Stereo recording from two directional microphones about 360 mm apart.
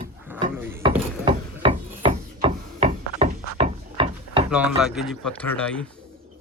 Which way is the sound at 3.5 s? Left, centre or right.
Centre.